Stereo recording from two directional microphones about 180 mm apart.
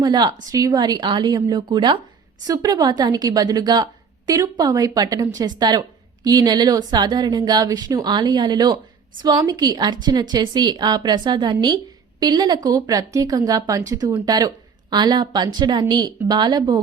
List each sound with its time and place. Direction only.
0.0 s a woman's voice: 25° right (ahead or behind)